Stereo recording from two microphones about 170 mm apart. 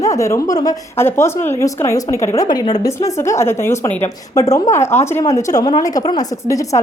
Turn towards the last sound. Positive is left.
turn(degrees=20)  # may be behind; listen again after turning